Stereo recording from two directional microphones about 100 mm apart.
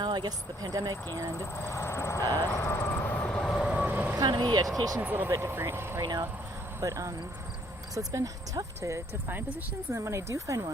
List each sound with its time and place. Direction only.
0.0 s speech: 45° right (ahead or behind)
1.4 s vehicle: 25° left (ahead or behind); by 3.6 s 5° left (ahead or behind)
3.6 s train: 10° right (ahead or behind)
4.2 s speech: 40° right (ahead or behind)
4.9 s speech: 20° right (ahead or behind)
6.0 s speech: 40° right (ahead or behind)